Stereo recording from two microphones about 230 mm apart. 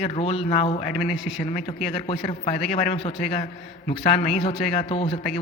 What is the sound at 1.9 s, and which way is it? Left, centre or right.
A man's voice, left.